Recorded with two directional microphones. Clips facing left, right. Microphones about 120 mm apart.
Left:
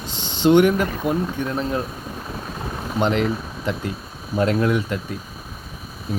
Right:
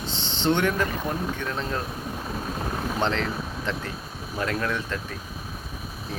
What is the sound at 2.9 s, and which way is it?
Speech, 15° left (ahead or behind).